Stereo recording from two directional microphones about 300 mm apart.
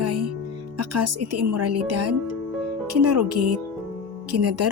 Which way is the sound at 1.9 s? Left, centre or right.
Right.